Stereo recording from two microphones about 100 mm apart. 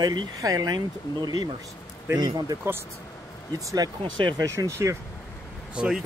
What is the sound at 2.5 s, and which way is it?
Speech, 35° right (ahead or behind).